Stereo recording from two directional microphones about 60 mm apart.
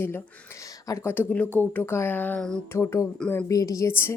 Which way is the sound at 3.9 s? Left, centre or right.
Left.